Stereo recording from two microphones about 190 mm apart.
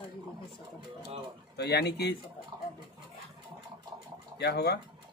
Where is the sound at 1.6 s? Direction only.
60° left (ahead or behind).